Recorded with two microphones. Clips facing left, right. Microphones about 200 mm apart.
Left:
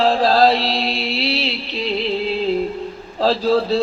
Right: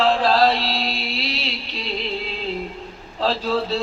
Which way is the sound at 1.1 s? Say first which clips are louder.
Left 6 dB; 35° left (ahead or behind).